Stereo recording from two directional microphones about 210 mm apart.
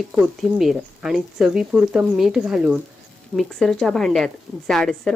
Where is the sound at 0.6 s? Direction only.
Centre (ahead or behind).